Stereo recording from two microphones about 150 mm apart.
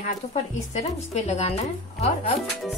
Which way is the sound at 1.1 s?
45° left (ahead or behind).